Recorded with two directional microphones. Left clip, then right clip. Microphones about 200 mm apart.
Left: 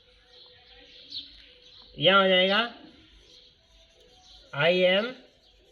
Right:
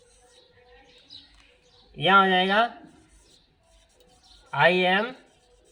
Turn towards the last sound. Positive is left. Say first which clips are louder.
# right 1 dB
turn(degrees=-40)  # may be behind; listen again after turning